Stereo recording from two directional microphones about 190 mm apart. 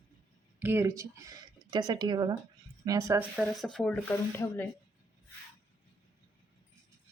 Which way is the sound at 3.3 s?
Centre (ahead or behind).